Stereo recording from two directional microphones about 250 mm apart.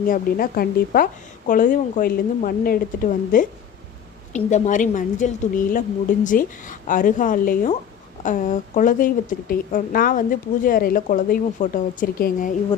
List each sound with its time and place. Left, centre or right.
0.0 s a woman's voice: left